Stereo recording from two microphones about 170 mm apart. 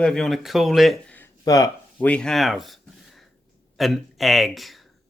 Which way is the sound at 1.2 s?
20° left (ahead or behind).